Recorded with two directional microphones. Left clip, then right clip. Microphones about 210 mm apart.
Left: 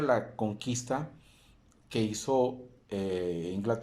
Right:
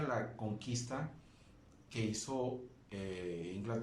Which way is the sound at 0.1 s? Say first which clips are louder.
Left 11 dB; 45° left (ahead or behind).